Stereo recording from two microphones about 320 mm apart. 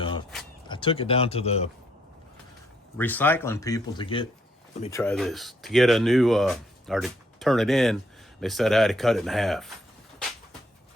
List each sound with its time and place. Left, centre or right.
0.0 s a sound: centre
0.7 s speech: centre
3.0 s speech: centre